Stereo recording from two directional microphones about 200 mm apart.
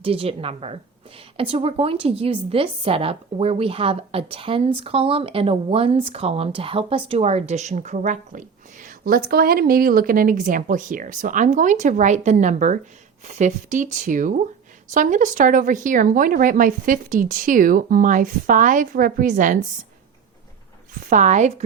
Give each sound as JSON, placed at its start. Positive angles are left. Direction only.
{"t": 0.0, "sound": "a woman's voice", "side_deg": -30}
{"t": 20.9, "sound": "a woman's voice", "side_deg": -40}